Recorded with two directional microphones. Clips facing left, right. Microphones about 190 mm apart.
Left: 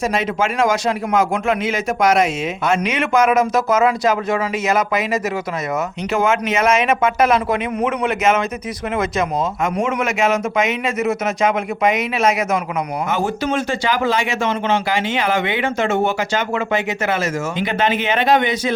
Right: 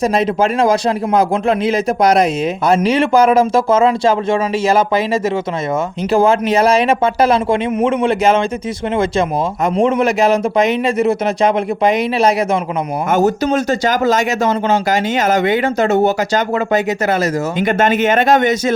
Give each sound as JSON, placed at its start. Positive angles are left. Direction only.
{"t": 0.0, "sound": "speech", "side_deg": -35}
{"t": 9.7, "sound": "speech", "side_deg": -35}